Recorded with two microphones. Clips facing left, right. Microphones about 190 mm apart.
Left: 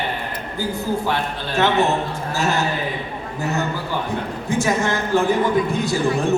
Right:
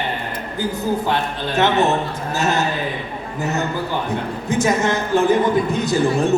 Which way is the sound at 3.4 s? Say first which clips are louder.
Right 2 dB; 20° right (ahead or behind).